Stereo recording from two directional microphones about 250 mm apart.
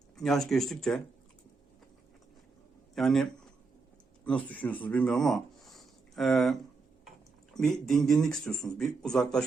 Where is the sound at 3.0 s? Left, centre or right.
Centre.